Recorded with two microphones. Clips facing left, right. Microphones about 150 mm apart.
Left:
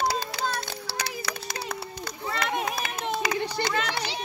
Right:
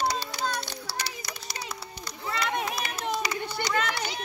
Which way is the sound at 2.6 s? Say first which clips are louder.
Left 1 dB; 55° left (ahead or behind).